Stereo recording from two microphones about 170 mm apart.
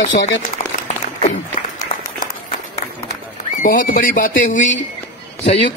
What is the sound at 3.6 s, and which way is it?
Speech, 55° left (ahead or behind).